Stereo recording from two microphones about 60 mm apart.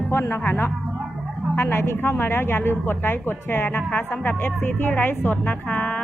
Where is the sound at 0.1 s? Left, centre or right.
Left.